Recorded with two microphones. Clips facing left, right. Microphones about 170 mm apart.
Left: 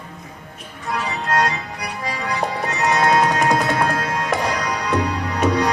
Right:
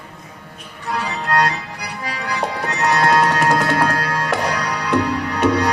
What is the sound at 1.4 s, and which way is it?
Music, 65° right (ahead or behind).